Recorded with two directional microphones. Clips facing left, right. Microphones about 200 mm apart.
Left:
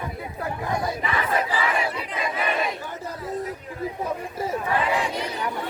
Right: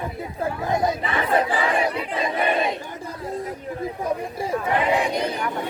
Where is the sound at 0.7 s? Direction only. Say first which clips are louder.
Right 4 dB; 20° right (ahead or behind).